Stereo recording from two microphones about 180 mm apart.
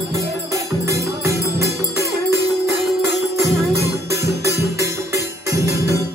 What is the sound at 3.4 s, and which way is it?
Music, 15° right (ahead or behind).